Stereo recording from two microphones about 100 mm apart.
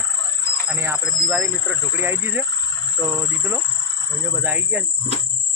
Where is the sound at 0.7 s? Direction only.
15° right (ahead or behind).